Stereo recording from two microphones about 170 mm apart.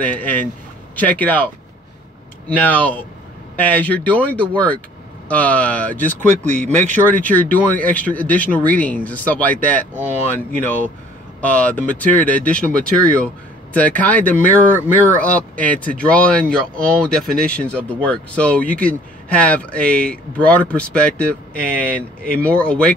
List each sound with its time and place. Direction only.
0.0 s speech: 10° left (ahead or behind)
2.5 s speech: 10° left (ahead or behind)
6.4 s speech: 45° right (ahead or behind)
7.1 s speech: 10° left (ahead or behind)